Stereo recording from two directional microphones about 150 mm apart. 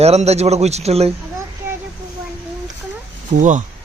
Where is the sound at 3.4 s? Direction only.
55° right (ahead or behind).